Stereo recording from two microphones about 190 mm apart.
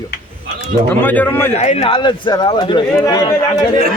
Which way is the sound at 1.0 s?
10° left (ahead or behind).